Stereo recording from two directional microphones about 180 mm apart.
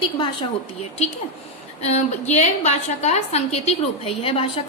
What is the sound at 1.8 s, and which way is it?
A woman's voice, 35° left (ahead or behind).